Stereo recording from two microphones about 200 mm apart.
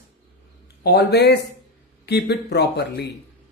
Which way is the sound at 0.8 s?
55° left (ahead or behind).